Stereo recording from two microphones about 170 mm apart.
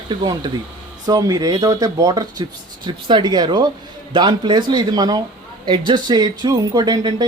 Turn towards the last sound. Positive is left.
turn(degrees=-25)  # may be behind; listen again after turning